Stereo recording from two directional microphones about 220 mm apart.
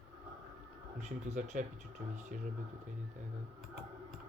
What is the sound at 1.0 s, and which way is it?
Speech, 30° right (ahead or behind).